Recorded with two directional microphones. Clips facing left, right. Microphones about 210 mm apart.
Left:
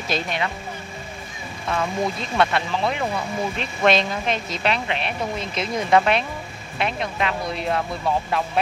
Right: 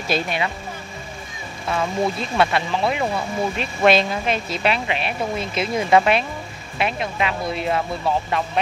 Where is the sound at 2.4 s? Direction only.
5° right (ahead or behind).